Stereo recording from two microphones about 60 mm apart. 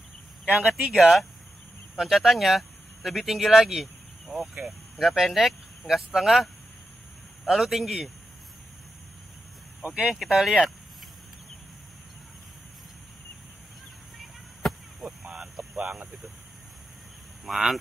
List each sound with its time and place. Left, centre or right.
0.5 s speech: right
0.9 s speech: centre
7.5 s speech: centre
9.8 s speech: right
10.1 s speech: centre
14.6 s a sound: centre
15.0 s a sound: centre
17.5 s speech: centre